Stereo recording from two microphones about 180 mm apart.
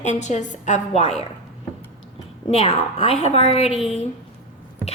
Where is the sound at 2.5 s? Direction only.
30° left (ahead or behind).